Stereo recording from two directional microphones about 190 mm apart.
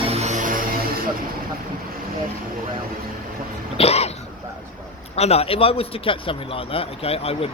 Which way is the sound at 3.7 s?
35° left (ahead or behind).